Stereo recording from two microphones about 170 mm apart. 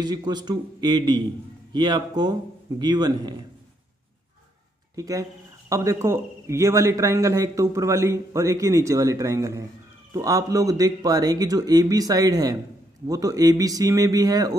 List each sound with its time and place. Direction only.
0.0 s a man's voice: 25° right (ahead or behind)
4.9 s a man's voice: 20° right (ahead or behind)